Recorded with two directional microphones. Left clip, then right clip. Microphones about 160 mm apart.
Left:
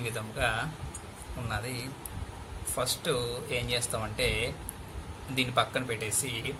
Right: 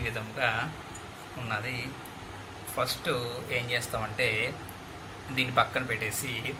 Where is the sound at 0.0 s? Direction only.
80° left.